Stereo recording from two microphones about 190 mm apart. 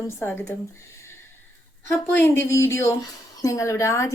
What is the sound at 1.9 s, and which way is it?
A woman's voice, 10° left (ahead or behind).